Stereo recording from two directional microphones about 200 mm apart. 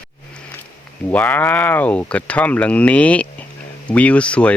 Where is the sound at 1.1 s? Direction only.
10° left (ahead or behind).